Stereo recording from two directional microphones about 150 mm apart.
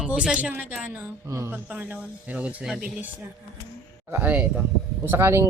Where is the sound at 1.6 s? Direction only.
10° right (ahead or behind).